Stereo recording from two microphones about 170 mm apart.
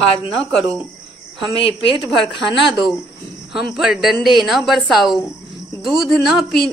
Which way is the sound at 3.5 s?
5° right (ahead or behind).